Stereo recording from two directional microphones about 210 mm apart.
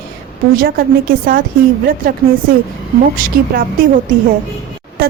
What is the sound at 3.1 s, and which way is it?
Speech, 40° right (ahead or behind).